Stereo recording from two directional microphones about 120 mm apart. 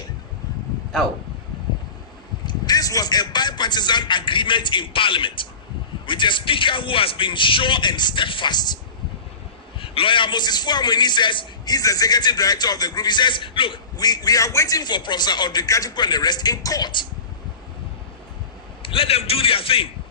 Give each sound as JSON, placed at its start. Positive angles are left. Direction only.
{"t": 2.5, "sound": "a man's voice", "side_deg": 35}
{"t": 9.8, "sound": "a man's voice", "side_deg": 50}
{"t": 18.8, "sound": "a man's voice", "side_deg": 50}